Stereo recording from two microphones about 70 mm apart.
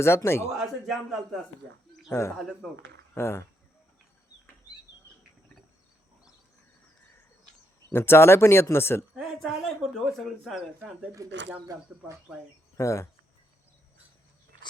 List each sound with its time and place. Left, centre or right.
0.0 s speech: left
0.5 s a man's voice: centre
2.0 s speech: left
2.4 s speech: centre
3.2 s speech: left
7.9 s speech: left
9.1 s speech: centre
11.2 s speech: right
12.7 s speech: left